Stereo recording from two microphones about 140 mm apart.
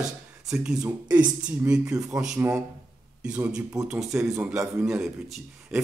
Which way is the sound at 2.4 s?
20° right (ahead or behind).